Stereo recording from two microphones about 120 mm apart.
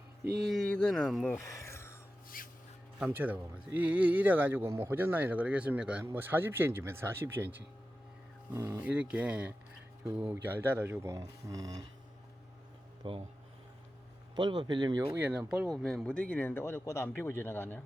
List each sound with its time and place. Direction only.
0.5 s speech: 10° left (ahead or behind)
1.4 s a sound: 25° left (ahead or behind)
3.1 s speech: 15° right (ahead or behind)
8.9 s speech: 10° right (ahead or behind); by 11.9 s 30° right (ahead or behind)
13.0 s speech: 45° right (ahead or behind)
14.3 s speech: 40° right (ahead or behind)
15.1 s speech: 10° right (ahead or behind)
15.7 s speech: 5° left (ahead or behind)